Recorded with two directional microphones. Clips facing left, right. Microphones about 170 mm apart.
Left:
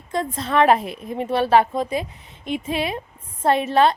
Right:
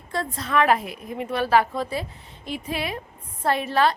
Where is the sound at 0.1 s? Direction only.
20° left (ahead or behind).